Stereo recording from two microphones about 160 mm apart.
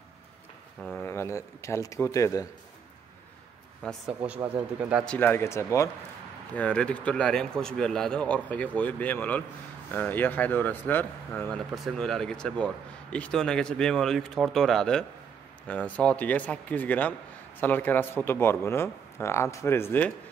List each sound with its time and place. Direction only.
1.0 s a man's voice: 15° left (ahead or behind)
3.8 s a man's voice: 5° left (ahead or behind)
4.2 s speech: 10° right (ahead or behind)
5.0 s a man's voice: 10° left (ahead or behind)